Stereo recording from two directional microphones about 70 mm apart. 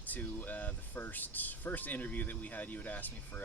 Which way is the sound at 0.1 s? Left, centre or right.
Left.